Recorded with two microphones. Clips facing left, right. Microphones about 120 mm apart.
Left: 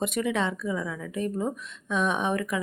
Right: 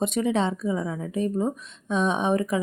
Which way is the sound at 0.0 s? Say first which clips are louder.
Right 3 dB; 25° right (ahead or behind).